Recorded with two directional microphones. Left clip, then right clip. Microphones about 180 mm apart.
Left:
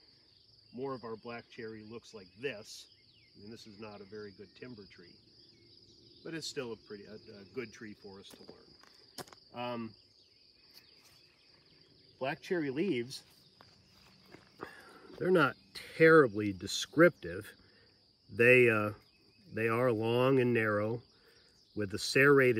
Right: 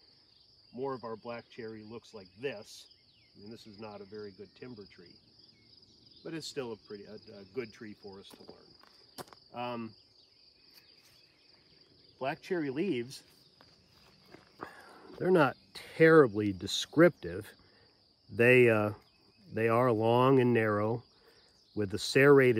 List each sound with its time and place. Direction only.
0.7 s speech: 35° right (ahead or behind); by 2.9 s 55° right (ahead or behind)
4.0 s speech: 40° right (ahead or behind)
6.2 s speech: 50° right (ahead or behind)
7.8 s speech: 35° right (ahead or behind); by 9.9 s 15° right (ahead or behind)
12.2 s speech: 15° right (ahead or behind)
14.6 s walk: 30° right (ahead or behind)
15.2 s speech: 35° right (ahead or behind)